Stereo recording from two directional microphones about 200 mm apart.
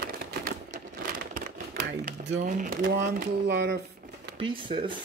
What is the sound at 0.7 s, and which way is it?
Crumpling, 45° right (ahead or behind).